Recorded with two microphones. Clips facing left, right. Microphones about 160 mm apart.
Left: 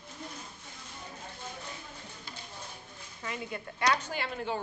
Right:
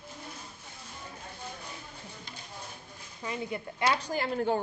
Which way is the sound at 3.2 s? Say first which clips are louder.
Right 3 dB; 20° right (ahead or behind).